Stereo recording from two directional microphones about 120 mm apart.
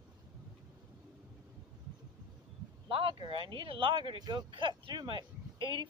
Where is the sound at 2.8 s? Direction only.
45° right (ahead or behind).